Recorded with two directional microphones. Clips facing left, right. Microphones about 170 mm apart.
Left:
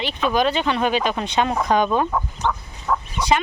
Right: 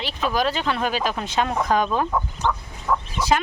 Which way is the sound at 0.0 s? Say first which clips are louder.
Left 3 dB; centre (ahead or behind).